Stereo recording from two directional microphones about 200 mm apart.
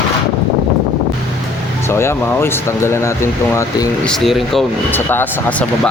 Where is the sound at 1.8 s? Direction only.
10° left (ahead or behind).